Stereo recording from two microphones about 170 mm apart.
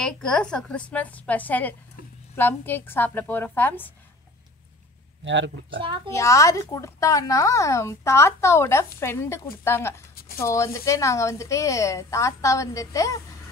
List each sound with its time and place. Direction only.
0.0 s speech: 5° left (ahead or behind)
5.2 s speech: 90° right
6.0 s speech: 15° left (ahead or behind)
10.1 s a sound: 65° left (ahead or behind)
10.4 s speech: 15° left (ahead or behind)